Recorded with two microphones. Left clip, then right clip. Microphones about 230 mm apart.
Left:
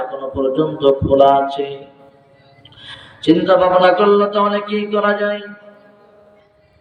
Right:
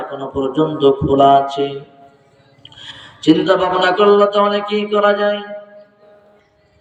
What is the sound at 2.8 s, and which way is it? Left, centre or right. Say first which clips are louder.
A man's voice: right 1 dB; right.